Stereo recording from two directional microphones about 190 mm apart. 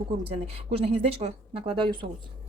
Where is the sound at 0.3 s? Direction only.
30° right (ahead or behind).